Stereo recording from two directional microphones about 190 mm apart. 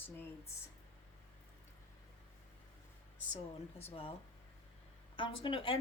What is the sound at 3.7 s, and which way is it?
Speech, 30° left (ahead or behind).